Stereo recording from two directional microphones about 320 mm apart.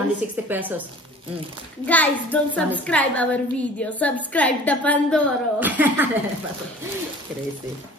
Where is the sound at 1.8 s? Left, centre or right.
Centre.